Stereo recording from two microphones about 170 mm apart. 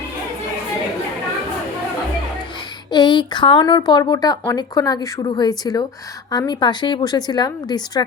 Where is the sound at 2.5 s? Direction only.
25° left (ahead or behind).